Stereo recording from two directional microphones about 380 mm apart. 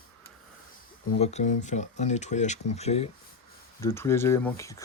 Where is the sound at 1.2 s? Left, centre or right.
Centre.